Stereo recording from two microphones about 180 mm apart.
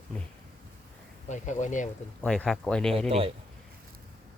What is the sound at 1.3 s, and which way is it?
Speech, 40° left (ahead or behind).